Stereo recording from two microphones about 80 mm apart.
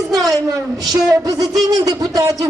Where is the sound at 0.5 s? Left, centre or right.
Right.